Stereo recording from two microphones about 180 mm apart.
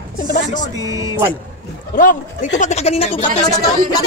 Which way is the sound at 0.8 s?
20° right (ahead or behind).